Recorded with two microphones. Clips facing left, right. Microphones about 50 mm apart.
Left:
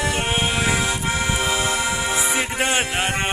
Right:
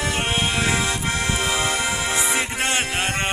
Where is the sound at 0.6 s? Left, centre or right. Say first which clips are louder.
Left 1 dB; centre.